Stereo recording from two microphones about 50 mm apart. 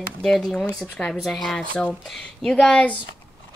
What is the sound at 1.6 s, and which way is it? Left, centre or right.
Speech, left.